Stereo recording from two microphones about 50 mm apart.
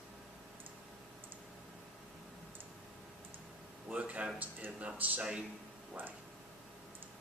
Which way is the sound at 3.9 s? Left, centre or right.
Right.